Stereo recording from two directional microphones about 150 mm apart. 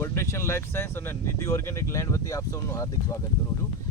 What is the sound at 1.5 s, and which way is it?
Speech, 20° left (ahead or behind).